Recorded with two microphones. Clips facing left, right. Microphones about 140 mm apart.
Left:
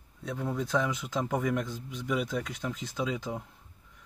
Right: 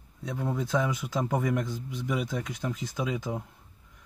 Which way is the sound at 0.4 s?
15° right (ahead or behind).